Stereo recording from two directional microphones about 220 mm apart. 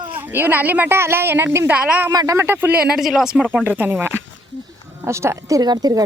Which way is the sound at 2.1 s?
15° right (ahead or behind).